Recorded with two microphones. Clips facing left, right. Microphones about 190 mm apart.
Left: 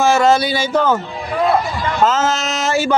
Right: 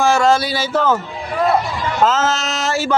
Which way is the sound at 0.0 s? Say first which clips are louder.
Left 1 dB; centre (ahead or behind).